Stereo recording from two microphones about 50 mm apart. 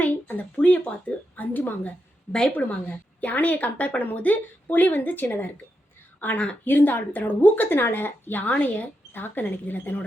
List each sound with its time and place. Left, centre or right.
0.0 s a sound: left
2.6 s a woman's voice: left
9.1 s a woman's voice: left